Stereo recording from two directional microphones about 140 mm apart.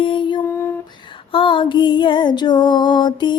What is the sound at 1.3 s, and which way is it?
Music, 35° left (ahead or behind).